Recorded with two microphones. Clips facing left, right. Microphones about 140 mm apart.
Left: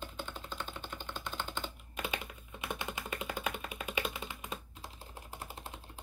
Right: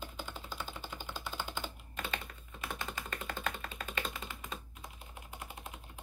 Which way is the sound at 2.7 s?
15° left (ahead or behind).